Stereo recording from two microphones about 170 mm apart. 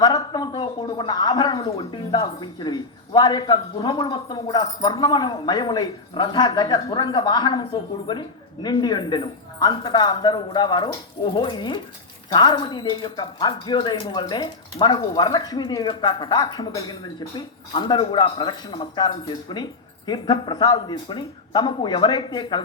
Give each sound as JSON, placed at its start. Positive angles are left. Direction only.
{"t": 0.0, "sound": "a woman's voice", "side_deg": 25}